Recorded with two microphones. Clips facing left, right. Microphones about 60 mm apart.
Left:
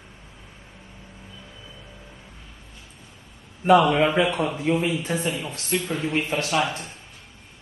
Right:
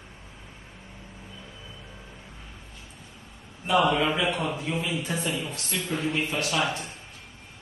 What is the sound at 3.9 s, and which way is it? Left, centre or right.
A man's voice, left.